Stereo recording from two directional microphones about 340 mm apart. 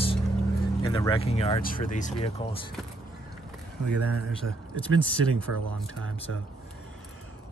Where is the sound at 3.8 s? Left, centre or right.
Right.